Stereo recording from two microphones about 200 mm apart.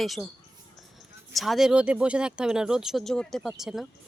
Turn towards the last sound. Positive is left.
turn(degrees=0)  # may be behind; listen again after turning